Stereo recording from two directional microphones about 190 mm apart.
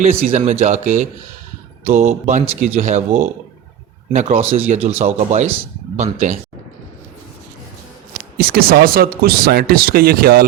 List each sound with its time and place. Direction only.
0.0 s speech: 35° right (ahead or behind)
8.4 s speech: 50° right (ahead or behind)